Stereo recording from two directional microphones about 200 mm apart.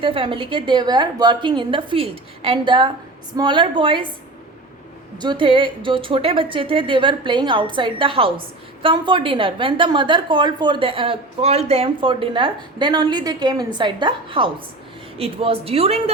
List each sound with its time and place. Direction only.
0.0 s a woman's voice: 25° right (ahead or behind)
5.2 s a woman's voice: 25° right (ahead or behind)